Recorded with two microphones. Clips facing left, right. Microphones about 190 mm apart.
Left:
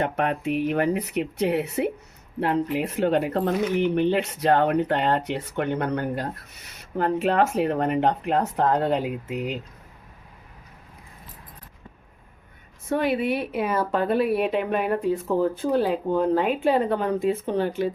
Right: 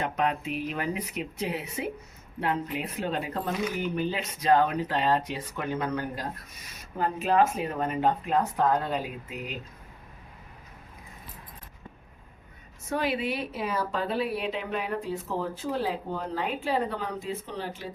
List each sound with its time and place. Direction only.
0.0 s speech: 60° left (ahead or behind)
12.9 s speech: 55° left (ahead or behind)